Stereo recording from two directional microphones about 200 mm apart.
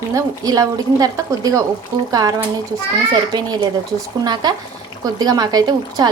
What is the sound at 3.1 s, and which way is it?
A woman's voice, 20° right (ahead or behind).